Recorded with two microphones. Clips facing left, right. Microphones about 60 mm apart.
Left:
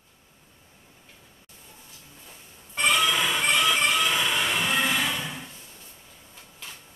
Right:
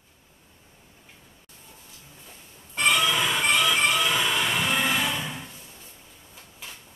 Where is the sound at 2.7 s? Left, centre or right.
Centre.